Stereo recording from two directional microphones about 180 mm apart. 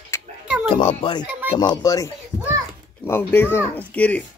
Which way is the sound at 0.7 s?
30° left (ahead or behind).